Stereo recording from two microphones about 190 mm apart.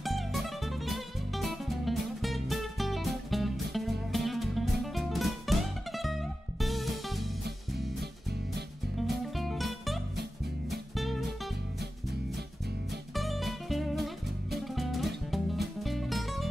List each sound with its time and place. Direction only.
0.0 s music: centre (ahead or behind)
8.0 s music: 60° right (ahead or behind)
8.9 s music: centre (ahead or behind)
13.1 s music: centre (ahead or behind)